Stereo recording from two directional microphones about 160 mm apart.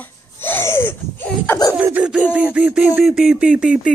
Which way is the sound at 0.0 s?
15° left (ahead or behind).